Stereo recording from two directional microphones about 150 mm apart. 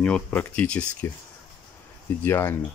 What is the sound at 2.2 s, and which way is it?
Speech, 15° left (ahead or behind).